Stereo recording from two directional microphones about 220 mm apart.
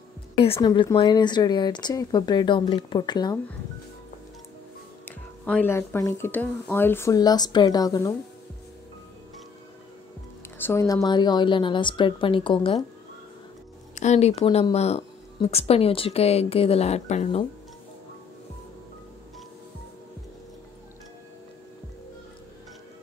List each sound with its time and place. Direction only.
0.4 s speech: 20° left (ahead or behind)
5.4 s speech: 5° left (ahead or behind)
10.6 s speech: 10° left (ahead or behind)
13.9 s speech: 30° left (ahead or behind)